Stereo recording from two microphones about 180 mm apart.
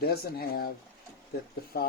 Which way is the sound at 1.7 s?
60° left (ahead or behind).